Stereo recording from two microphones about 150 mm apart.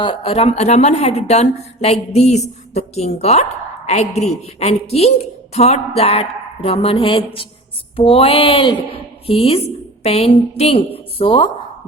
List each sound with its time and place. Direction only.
0.0 s a woman's voice: 35° left (ahead or behind)